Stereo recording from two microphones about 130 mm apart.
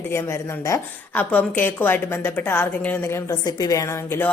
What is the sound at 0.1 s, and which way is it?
A woman's voice, 20° left (ahead or behind).